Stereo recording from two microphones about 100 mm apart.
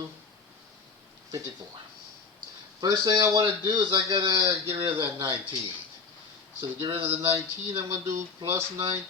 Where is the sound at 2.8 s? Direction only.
30° right (ahead or behind).